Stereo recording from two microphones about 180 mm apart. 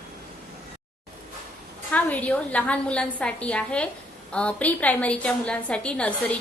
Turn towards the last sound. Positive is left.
turn(degrees=5)  # may be behind; listen again after turning